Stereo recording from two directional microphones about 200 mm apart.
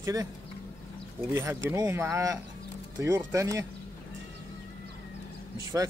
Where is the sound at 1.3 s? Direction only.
15° right (ahead or behind).